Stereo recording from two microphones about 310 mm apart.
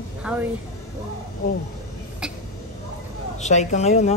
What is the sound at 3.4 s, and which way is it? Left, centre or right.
Speech, left.